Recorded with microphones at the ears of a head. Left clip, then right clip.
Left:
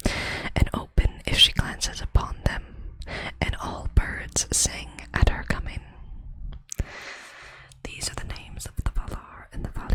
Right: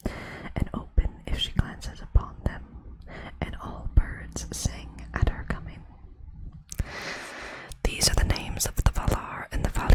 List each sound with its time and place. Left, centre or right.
0.0 s whispering: left
7.3 s whispering: right